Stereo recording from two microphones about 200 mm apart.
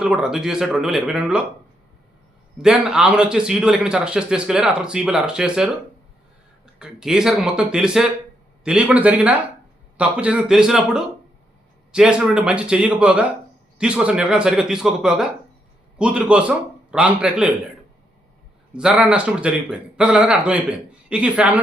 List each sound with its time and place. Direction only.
0.0 s a man's voice: 5° right (ahead or behind)
2.6 s a man's voice: 5° right (ahead or behind)
6.7 s a man's voice: 5° right (ahead or behind)
18.8 s a man's voice: 5° right (ahead or behind)